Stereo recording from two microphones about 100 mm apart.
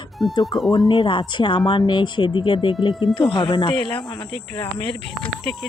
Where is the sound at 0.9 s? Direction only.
55° left (ahead or behind).